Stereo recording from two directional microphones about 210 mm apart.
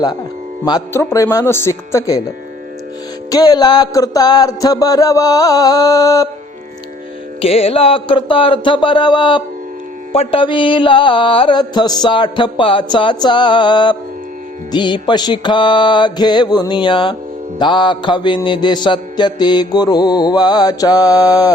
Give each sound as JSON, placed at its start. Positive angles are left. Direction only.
{"t": 0.6, "sound": "music", "side_deg": 15}
{"t": 3.2, "sound": "music", "side_deg": 20}
{"t": 7.4, "sound": "mantra", "side_deg": 25}